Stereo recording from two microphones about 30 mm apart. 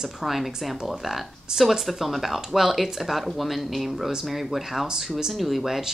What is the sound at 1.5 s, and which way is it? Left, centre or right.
Speech, right.